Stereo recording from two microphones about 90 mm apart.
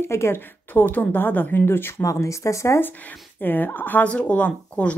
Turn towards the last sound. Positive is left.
turn(degrees=15)  # may be behind; listen again after turning